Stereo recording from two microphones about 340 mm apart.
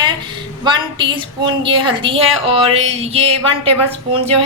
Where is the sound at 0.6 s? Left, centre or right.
Centre.